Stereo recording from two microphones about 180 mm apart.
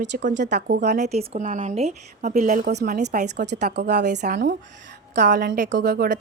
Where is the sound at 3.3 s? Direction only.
70° right (ahead or behind).